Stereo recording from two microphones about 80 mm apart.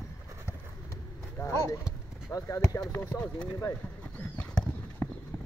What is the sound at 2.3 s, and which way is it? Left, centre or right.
Speech, left.